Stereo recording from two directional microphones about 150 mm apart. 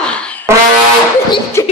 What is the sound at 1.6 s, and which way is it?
Beatboxing, 20° left (ahead or behind).